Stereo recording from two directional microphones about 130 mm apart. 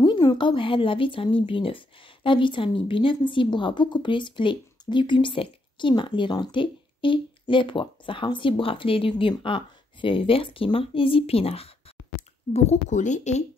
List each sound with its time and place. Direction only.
0.0 s a woman's voice: 30° left (ahead or behind); by 11.7 s 50° left (ahead or behind)
12.2 s a sound: 55° left (ahead or behind)
12.5 s speech: 65° left (ahead or behind)